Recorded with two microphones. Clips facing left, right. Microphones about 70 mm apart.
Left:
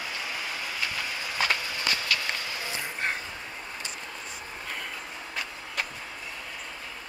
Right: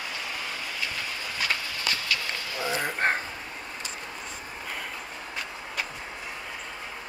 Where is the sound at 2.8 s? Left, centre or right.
Right.